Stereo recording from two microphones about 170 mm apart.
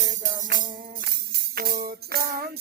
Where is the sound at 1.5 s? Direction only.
60° right (ahead or behind).